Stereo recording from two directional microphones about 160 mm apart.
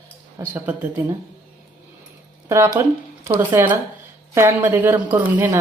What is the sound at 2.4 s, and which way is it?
Speech, 15° right (ahead or behind).